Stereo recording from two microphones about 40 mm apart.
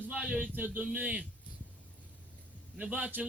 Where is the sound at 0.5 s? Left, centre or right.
Right.